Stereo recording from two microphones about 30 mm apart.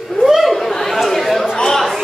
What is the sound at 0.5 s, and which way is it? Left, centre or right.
Chatter, centre.